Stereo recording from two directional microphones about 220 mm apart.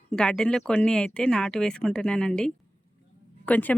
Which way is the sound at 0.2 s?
5° left (ahead or behind).